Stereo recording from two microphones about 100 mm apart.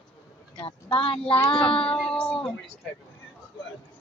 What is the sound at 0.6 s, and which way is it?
A woman's voice, 65° left (ahead or behind).